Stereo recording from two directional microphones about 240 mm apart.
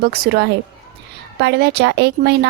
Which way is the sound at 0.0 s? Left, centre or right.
Right.